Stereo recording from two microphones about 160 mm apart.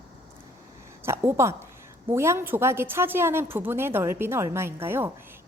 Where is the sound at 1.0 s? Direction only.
15° right (ahead or behind).